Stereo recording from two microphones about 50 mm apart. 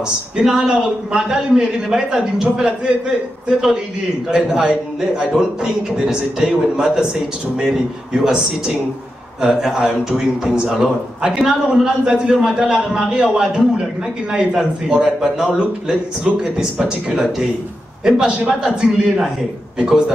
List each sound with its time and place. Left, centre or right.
0.4 s a man's voice: centre